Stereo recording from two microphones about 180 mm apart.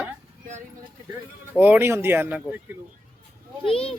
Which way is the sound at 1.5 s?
10° right (ahead or behind).